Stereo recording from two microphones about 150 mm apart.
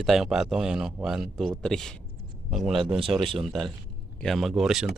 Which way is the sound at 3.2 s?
35° right (ahead or behind).